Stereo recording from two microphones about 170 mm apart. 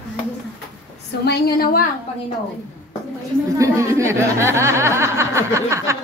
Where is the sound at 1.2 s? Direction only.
65° left (ahead or behind).